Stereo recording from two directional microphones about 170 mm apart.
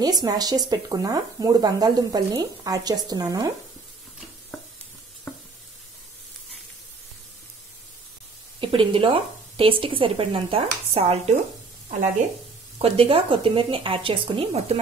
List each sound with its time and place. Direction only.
0.0 s speech: 20° right (ahead or behind)
5.3 s stir: 15° left (ahead or behind)
8.5 s speech: 30° right (ahead or behind)
12.7 s speech: 35° right (ahead or behind)